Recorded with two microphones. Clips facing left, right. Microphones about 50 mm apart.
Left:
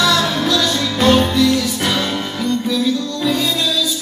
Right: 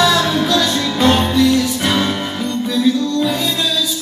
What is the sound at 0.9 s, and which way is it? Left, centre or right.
Music, centre.